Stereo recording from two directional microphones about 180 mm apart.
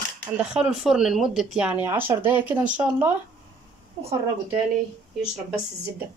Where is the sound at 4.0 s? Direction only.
30° right (ahead or behind).